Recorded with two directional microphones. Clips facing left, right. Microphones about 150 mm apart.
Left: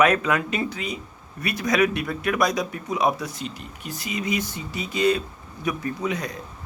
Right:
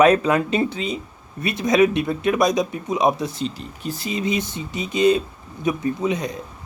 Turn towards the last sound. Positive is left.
turn(degrees=-20)  # may be behind; listen again after turning